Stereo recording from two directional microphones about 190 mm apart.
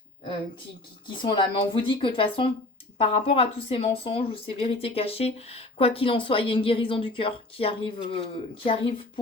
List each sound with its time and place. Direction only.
1.0 s speech: 25° left (ahead or behind)